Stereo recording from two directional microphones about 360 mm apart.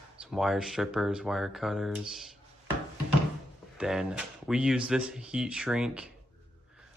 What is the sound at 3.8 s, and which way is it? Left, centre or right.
Speech, centre.